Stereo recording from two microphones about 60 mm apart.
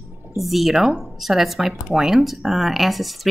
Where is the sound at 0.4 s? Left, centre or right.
Centre.